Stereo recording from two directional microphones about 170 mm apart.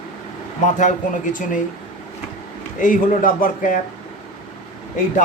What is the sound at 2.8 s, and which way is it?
Speech, 50° left (ahead or behind).